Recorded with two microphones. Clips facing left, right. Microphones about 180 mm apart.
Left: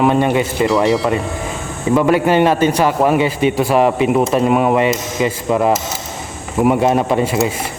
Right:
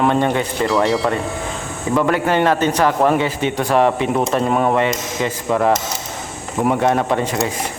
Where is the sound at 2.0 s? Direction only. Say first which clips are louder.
Left 4 dB; 15° left (ahead or behind).